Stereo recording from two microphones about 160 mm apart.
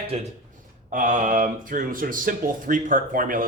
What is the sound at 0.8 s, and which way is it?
Speech, 55° right (ahead or behind).